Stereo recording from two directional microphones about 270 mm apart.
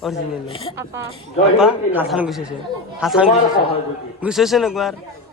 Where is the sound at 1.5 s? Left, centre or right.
Centre.